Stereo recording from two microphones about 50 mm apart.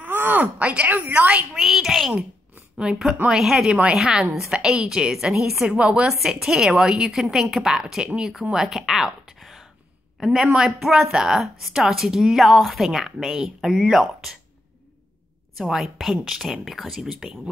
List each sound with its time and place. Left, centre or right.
0.0 s a sound: right
0.7 s a woman's voice: right
1.5 s a woman's voice: centre
3.3 s a woman's voice: centre
5.7 s a woman's voice: right
6.2 s a woman's voice: centre
15.5 s a woman's voice: centre